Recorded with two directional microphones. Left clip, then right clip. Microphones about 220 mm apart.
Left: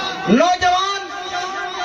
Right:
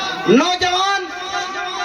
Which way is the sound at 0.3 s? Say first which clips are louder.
Left 4 dB; 25° right (ahead or behind).